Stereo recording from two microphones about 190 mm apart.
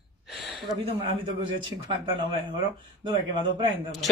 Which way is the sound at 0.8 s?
30° right (ahead or behind).